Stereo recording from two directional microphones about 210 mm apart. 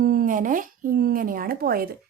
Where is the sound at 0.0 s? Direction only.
45° right (ahead or behind).